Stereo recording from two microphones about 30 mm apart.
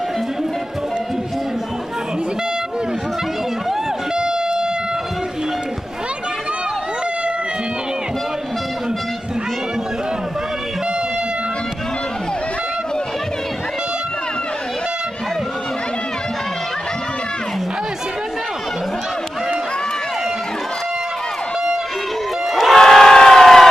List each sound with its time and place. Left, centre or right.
22.5 s crowd: centre
22.8 s crowd: centre